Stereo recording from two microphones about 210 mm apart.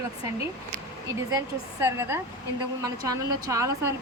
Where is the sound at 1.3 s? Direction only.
15° right (ahead or behind).